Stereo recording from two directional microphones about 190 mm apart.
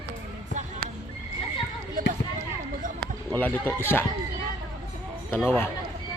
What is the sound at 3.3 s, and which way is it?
Speech, 10° left (ahead or behind).